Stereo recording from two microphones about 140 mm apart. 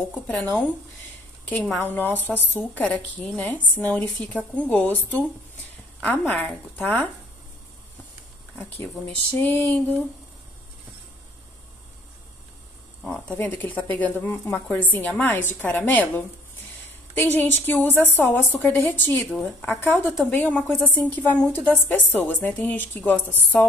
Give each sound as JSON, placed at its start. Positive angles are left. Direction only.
{"t": 1.4, "sound": "a woman's voice", "side_deg": 15}
{"t": 9.0, "sound": "a woman's voice", "side_deg": 10}
{"t": 13.0, "sound": "a woman's voice", "side_deg": 5}
{"t": 17.4, "sound": "a woman's voice", "side_deg": 15}